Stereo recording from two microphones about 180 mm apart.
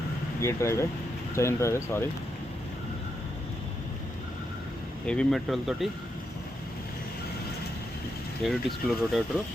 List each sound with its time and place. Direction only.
0.4 s speech: 15° left (ahead or behind)
5.0 s speech: 5° left (ahead or behind)
8.4 s speech: centre (ahead or behind)